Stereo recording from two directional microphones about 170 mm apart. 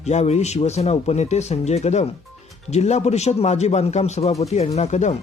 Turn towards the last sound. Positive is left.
turn(degrees=40)  # may be behind; listen again after turning